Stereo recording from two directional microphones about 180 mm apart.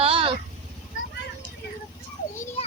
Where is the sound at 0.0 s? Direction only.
30° right (ahead or behind).